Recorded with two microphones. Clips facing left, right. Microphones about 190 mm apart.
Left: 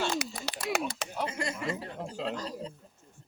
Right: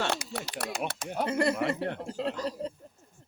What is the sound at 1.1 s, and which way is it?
Speech, 60° right (ahead or behind).